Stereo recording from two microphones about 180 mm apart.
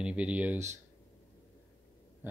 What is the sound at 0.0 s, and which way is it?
Speech, 5° right (ahead or behind).